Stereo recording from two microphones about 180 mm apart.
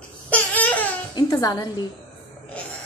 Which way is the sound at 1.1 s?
20° left (ahead or behind).